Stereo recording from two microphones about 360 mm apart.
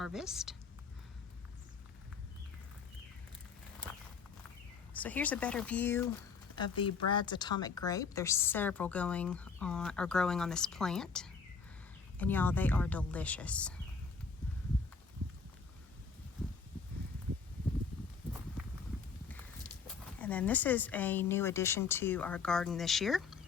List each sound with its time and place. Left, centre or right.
0.0 s speech: centre
4.9 s speech: centre
20.1 s speech: centre